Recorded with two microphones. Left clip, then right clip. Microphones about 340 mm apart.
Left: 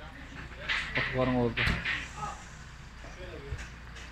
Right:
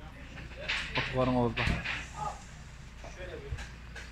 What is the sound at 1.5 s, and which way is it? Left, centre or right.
Speech, right.